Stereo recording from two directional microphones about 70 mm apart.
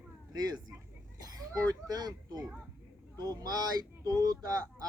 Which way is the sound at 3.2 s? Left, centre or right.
Right.